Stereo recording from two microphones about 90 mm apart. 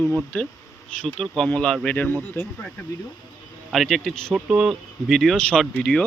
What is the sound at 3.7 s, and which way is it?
Speech, centre (ahead or behind).